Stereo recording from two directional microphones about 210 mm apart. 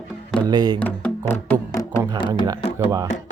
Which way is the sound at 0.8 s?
5° left (ahead or behind).